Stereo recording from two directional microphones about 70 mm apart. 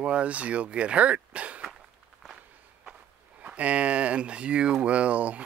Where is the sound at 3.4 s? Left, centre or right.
Centre.